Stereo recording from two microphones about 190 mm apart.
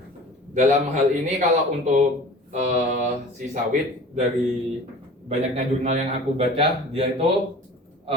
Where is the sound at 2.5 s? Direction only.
40° right (ahead or behind).